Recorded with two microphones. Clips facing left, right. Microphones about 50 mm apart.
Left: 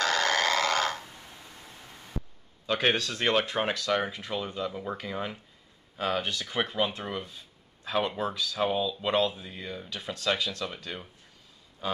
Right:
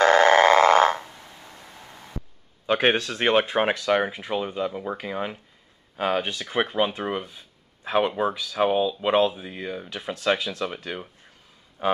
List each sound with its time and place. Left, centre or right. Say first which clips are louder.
0.0 s a sound: right 10 dB; right
2.6 s speech: right 5 dB; right
11.8 s speech: right 9 dB; right